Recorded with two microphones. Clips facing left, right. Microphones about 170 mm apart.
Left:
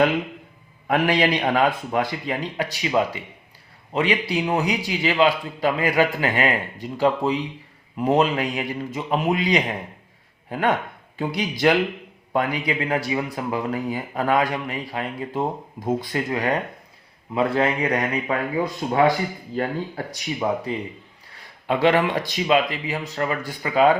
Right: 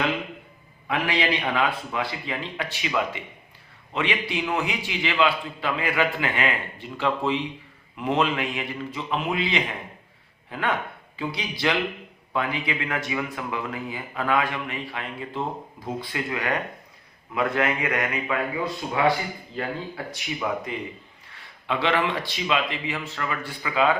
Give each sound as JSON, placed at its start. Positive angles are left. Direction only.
{"t": 0.9, "sound": "a man's voice", "side_deg": 45}